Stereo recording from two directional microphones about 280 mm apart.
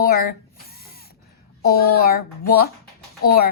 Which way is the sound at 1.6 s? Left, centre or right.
Left.